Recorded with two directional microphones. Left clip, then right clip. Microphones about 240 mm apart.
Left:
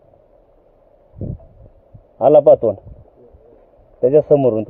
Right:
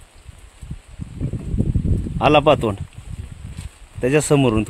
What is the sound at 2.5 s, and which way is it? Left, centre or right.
Speech, right.